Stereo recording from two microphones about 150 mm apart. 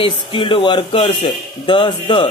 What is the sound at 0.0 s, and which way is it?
Speech, 35° left (ahead or behind).